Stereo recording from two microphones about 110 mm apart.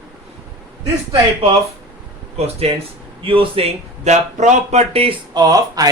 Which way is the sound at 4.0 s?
90° right.